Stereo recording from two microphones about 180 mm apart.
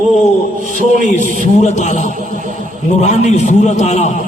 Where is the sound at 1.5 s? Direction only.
40° left (ahead or behind).